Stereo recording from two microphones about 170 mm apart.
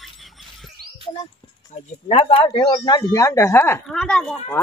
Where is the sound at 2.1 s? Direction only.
35° left (ahead or behind).